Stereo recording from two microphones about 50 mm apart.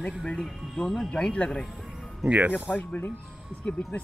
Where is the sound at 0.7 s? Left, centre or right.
Centre.